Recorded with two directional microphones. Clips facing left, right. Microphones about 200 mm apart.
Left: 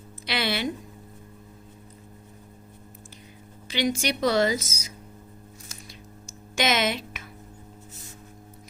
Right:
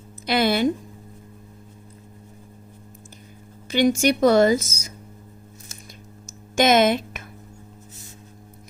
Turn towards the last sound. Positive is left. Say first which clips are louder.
# right 8 dB
turn(degrees=-50)  # may be behind; listen again after turning